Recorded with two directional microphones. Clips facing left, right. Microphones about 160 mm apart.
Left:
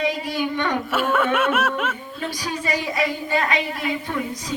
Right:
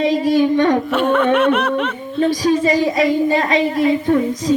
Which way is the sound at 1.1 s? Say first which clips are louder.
Right 6 dB; 5° left (ahead or behind).